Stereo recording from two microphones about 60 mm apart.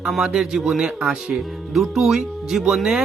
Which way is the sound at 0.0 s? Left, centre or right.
Centre.